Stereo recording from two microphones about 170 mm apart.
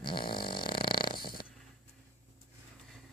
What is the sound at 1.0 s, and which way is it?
Dog, 30° left (ahead or behind).